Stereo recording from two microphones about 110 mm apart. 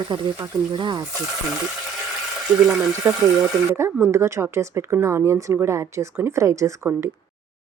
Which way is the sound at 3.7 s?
25° right (ahead or behind).